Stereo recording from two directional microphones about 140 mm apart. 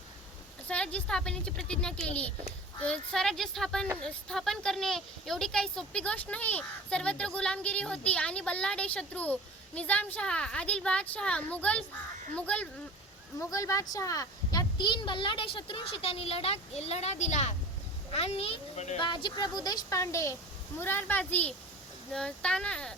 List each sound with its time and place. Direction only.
0.7 s speech: 10° left (ahead or behind)
13.4 s speech: 20° left (ahead or behind); by 17.5 s 55° left (ahead or behind)
18.1 s a child's voice: 45° left (ahead or behind)
18.9 s speech: 35° left (ahead or behind); by 23.0 s 5° left (ahead or behind)